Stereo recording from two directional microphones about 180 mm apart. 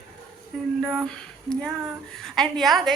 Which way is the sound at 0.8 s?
Centre (ahead or behind).